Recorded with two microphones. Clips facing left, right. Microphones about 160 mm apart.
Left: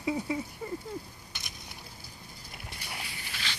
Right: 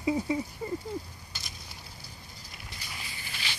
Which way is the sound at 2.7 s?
65° left (ahead or behind).